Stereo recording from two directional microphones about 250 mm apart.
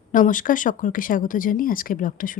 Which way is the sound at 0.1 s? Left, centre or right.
Left.